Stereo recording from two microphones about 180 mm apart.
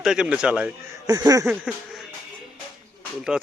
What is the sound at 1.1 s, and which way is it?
Speech, 20° right (ahead or behind).